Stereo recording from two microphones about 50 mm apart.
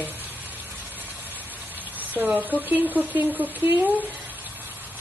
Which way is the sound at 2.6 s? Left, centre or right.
Right.